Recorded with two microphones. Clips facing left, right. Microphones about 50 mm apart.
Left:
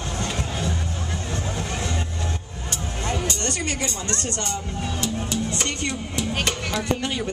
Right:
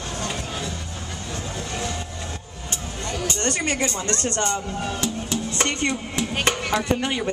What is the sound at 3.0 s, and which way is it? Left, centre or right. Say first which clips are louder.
Music: left 2 dB; left.